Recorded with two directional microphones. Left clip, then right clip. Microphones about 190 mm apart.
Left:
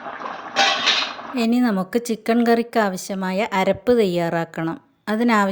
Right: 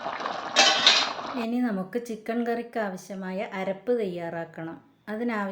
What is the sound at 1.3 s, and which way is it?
Speech, 60° left (ahead or behind).